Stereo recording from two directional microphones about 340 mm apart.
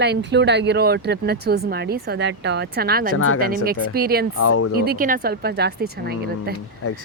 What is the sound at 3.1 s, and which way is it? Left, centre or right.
Speech, left.